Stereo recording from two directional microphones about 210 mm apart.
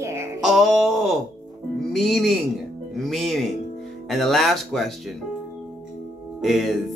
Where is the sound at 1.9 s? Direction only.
Centre (ahead or behind).